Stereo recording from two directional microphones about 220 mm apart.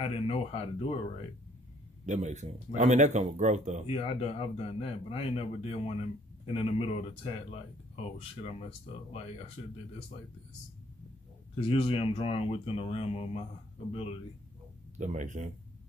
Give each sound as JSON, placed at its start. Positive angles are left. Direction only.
{"t": 0.0, "sound": "speech", "side_deg": 25}
{"t": 2.0, "sound": "speech", "side_deg": -35}
{"t": 3.8, "sound": "speech", "side_deg": 25}
{"t": 11.5, "sound": "speech", "side_deg": 25}
{"t": 15.0, "sound": "speech", "side_deg": -35}